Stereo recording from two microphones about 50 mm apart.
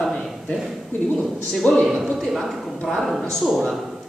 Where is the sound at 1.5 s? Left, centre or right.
Centre.